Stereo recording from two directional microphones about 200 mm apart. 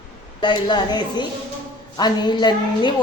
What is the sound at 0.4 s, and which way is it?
A woman's voice, 20° left (ahead or behind).